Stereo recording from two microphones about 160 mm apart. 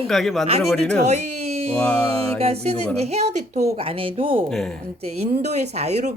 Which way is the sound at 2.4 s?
40° right (ahead or behind).